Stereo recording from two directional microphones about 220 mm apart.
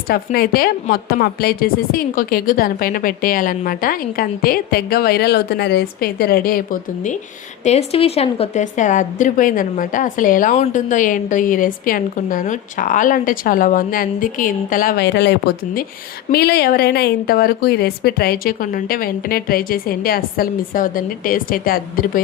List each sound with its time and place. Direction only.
0.1 s a woman's voice: 40° left (ahead or behind)